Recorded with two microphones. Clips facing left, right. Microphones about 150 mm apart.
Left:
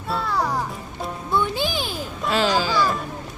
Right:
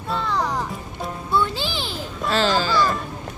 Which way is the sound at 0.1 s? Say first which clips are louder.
Even; 5° left (ahead or behind).